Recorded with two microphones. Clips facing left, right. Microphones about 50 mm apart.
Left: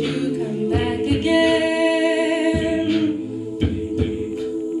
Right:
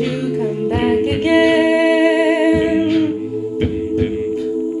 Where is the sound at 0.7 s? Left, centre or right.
Right.